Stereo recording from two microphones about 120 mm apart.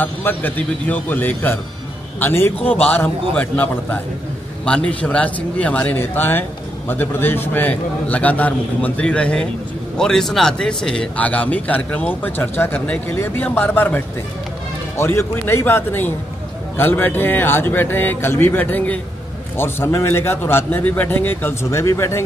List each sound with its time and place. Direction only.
0.0 s a man's voice: 15° left (ahead or behind)